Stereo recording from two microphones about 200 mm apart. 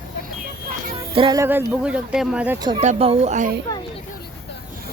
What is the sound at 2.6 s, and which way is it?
Speech, 20° right (ahead or behind).